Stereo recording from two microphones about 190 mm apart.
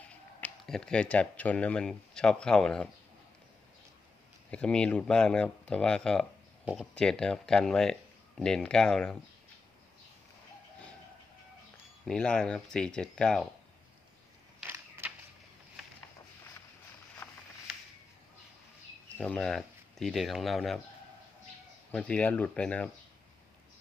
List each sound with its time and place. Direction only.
0.4 s speech: 5° left (ahead or behind)
4.5 s speech: 5° left (ahead or behind)
12.0 s speech: 5° left (ahead or behind)
14.6 s a sound: 10° right (ahead or behind)
17.2 s a sound: 10° left (ahead or behind)
19.2 s speech: 5° left (ahead or behind)
21.9 s speech: 5° left (ahead or behind)